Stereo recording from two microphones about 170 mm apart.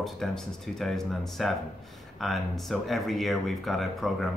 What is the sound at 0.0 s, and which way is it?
Speech, 5° left (ahead or behind).